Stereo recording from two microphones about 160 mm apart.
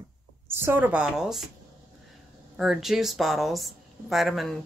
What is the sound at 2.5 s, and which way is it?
Speech, centre (ahead or behind).